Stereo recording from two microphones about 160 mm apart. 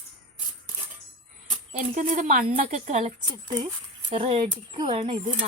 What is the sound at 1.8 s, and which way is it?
Speech, 50° right (ahead or behind).